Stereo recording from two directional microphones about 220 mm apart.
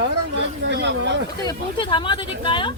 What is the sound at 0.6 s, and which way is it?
Speech, 55° right (ahead or behind).